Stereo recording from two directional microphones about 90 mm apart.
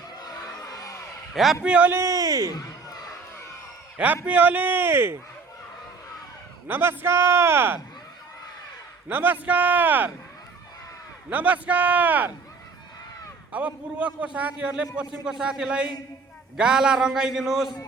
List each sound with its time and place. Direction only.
0.2 s crowd: 45° left (ahead or behind)
1.3 s a man's voice: centre (ahead or behind)
1.6 s a man's voice: 15° right (ahead or behind)
1.9 s speech: 35° right (ahead or behind)
2.5 s a sound: 45° left (ahead or behind)
3.9 s a man's voice: 20° right (ahead or behind)
6.7 s a man's voice: 25° right (ahead or behind)
9.0 s a man's voice: 20° right (ahead or behind)
11.3 s a man's voice: 20° right (ahead or behind)
13.5 s a man's voice: 15° right (ahead or behind)